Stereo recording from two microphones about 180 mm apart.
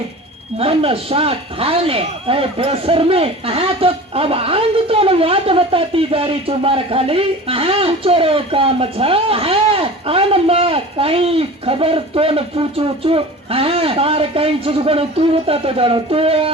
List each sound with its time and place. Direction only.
0.6 s speech: 30° right (ahead or behind)